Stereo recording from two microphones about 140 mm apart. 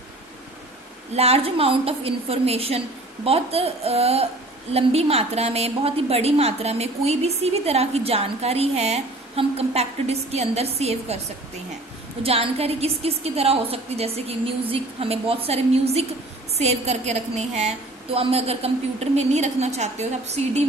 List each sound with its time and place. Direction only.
1.1 s a woman's voice: 45° right (ahead or behind)
12.2 s a woman's voice: 45° right (ahead or behind)